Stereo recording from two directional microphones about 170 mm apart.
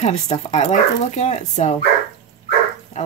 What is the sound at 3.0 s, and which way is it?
Duck, 45° left (ahead or behind).